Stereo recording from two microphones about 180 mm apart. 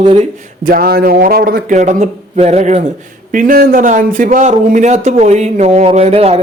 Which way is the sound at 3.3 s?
50° right (ahead or behind).